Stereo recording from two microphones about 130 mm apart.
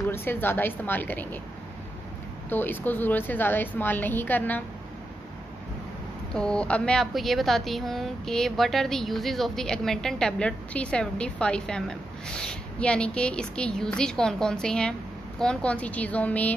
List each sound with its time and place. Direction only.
0.1 s a woman's voice: 15° left (ahead or behind)
2.5 s a woman's voice: 15° left (ahead or behind)
6.3 s a woman's voice: 5° left (ahead or behind)